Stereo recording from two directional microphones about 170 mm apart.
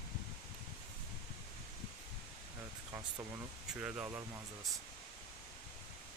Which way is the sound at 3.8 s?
5° right (ahead or behind).